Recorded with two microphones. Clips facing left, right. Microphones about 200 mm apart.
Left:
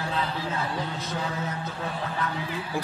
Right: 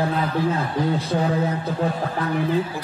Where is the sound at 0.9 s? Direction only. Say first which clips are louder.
Right 9 dB; 35° right (ahead or behind).